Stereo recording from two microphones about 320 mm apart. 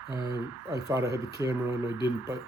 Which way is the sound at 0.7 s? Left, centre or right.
Centre.